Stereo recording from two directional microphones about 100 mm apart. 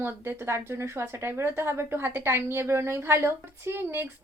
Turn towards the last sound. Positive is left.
turn(degrees=-25)  # may be behind; listen again after turning